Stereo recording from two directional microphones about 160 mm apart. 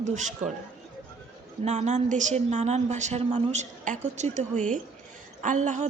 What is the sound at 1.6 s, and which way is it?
A woman's voice, 45° right (ahead or behind).